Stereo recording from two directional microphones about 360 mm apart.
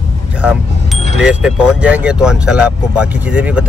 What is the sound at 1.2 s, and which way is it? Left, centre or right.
Speech, centre.